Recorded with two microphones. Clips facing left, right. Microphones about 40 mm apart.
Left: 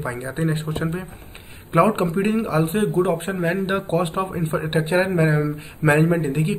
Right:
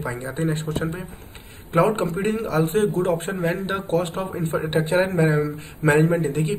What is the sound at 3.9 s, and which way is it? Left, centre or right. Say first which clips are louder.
A man's voice: left 1 dB; centre.